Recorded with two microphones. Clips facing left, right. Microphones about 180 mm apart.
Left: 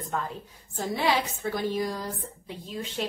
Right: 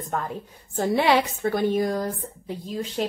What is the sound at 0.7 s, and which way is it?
A woman's voice, 65° right (ahead or behind).